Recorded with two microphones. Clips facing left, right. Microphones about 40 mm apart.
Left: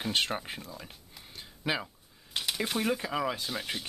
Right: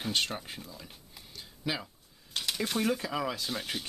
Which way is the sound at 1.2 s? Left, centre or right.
Left.